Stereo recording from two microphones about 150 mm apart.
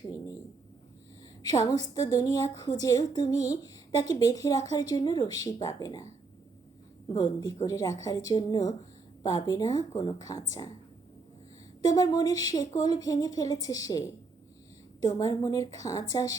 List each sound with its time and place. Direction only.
1.4 s a woman's voice: 25° left (ahead or behind)
7.1 s speech: 25° left (ahead or behind)
11.8 s speech: 25° left (ahead or behind)
15.0 s speech: 20° left (ahead or behind)